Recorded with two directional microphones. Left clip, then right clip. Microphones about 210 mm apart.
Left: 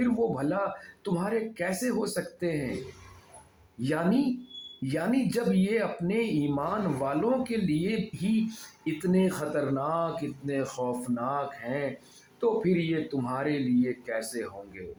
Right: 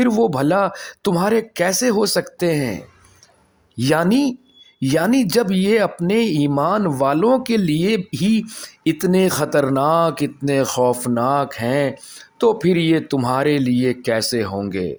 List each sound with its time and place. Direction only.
0.0 s speech: 45° right (ahead or behind)
3.8 s speech: 45° right (ahead or behind)